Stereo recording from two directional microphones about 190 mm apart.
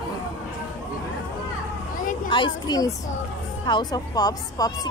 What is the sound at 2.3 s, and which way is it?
A woman's voice, 20° left (ahead or behind).